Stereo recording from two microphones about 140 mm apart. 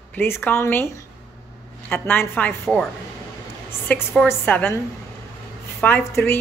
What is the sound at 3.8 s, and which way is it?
Speech, 15° left (ahead or behind).